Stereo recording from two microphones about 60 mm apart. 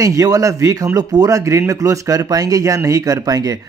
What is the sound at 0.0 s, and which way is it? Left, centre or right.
Speech, right.